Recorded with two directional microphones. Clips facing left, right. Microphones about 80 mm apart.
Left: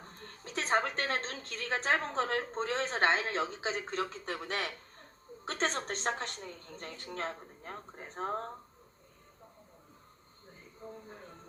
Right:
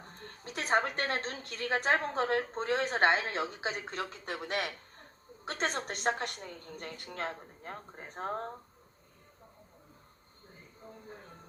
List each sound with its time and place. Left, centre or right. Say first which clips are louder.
0.4 s a woman's voice: right 1 dB; centre